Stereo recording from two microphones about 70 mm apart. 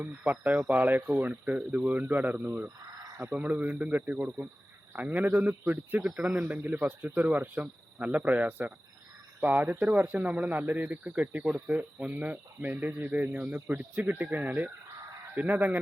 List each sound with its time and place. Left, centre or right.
0.0 s speech: right
2.4 s speech: right
3.3 s speech: right
6.0 s speech: centre
6.5 s speech: right